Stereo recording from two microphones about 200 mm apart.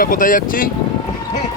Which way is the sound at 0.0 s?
45° left (ahead or behind).